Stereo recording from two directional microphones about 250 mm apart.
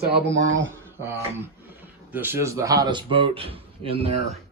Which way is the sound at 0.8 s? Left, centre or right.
Centre.